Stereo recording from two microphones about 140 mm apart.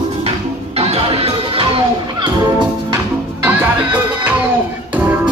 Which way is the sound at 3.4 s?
10° right (ahead or behind).